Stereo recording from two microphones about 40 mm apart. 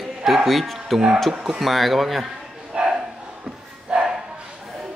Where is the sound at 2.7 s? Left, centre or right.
Centre.